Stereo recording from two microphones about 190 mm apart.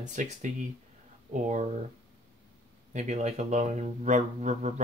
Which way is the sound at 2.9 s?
35° right (ahead or behind).